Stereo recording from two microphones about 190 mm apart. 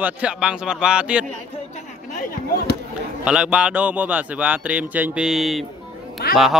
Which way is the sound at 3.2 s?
5° right (ahead or behind).